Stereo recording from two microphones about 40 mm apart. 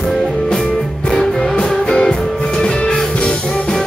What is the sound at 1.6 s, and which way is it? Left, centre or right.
Music, left.